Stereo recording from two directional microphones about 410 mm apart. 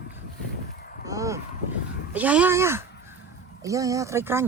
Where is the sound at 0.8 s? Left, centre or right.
Left.